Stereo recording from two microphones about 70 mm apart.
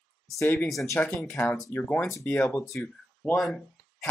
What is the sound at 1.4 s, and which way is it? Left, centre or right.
Speech, left.